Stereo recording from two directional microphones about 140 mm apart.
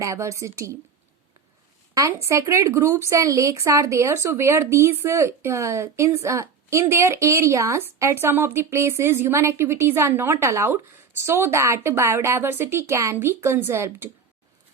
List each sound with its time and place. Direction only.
0.0 s speech: 20° right (ahead or behind)
2.0 s speech: 20° right (ahead or behind)